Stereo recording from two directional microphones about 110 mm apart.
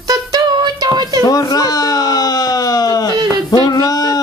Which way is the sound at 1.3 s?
35° left (ahead or behind).